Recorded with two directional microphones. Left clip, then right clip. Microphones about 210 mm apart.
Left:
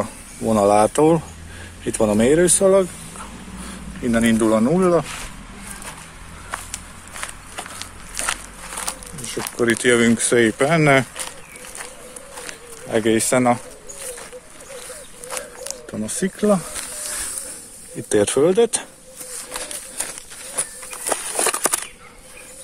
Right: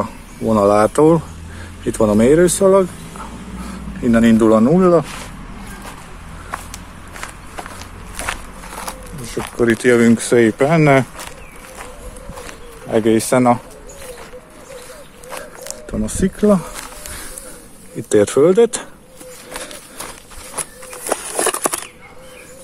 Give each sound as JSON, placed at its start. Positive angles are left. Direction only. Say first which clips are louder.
{"t": 0.0, "sound": "speech", "louder": "right 3 dB", "side_deg": 10}
{"t": 4.0, "sound": "speech", "louder": "right 5 dB", "side_deg": 0}
{"t": 7.5, "sound": "walk", "louder": "right 2 dB", "side_deg": 5}
{"t": 8.2, "sound": "walk", "louder": "right 1 dB", "side_deg": 15}
{"t": 8.8, "sound": "speech", "louder": "right 1 dB", "side_deg": 5}
{"t": 12.4, "sound": "a sound", "louder": "right 4 dB", "side_deg": 5}
{"t": 15.9, "sound": "speech", "louder": "right 5 dB", "side_deg": 0}
{"t": 18.1, "sound": "speech", "louder": "right 4 dB", "side_deg": 5}
{"t": 20.5, "sound": "insect", "louder": "right 2 dB", "side_deg": 0}